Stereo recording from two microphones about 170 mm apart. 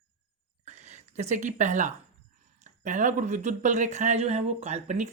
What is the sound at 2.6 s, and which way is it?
Speech, 45° right (ahead or behind).